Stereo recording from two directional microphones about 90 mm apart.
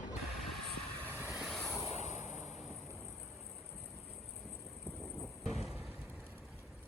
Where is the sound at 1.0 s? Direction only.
20° right (ahead or behind).